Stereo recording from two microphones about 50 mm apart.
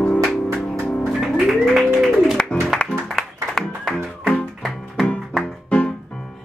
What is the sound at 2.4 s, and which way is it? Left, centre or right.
Music, centre.